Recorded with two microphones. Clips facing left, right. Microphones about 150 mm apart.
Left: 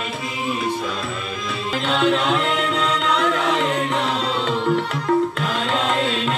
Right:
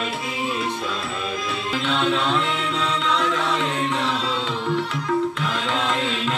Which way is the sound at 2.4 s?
55° left (ahead or behind).